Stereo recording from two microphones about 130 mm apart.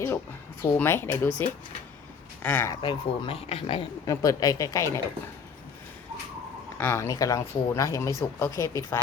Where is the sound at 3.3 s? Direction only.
50° left (ahead or behind).